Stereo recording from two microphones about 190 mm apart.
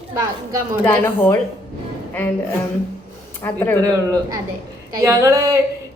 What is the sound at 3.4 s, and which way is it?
Speech, 10° left (ahead or behind).